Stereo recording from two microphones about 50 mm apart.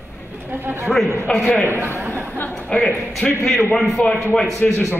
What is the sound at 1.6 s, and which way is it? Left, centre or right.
Speech, right.